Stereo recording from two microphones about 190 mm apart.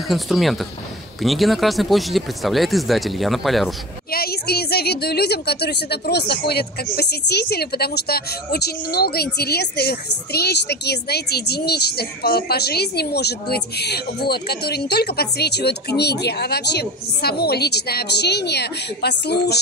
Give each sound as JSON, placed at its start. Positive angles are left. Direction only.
{"t": 0.1, "sound": "speech", "side_deg": 0}
{"t": 4.1, "sound": "a woman's voice", "side_deg": 55}